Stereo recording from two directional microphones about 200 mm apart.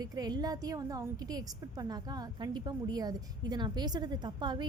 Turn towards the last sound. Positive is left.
turn(degrees=-20)  # may be behind; listen again after turning